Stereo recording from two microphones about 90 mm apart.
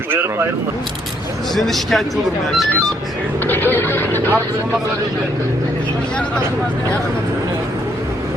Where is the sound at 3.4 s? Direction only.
20° left (ahead or behind).